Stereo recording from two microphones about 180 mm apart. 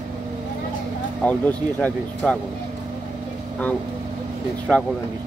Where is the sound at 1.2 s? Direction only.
10° left (ahead or behind).